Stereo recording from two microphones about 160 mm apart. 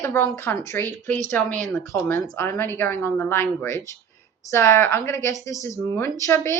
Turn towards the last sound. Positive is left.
turn(degrees=15)  # may be behind; listen again after turning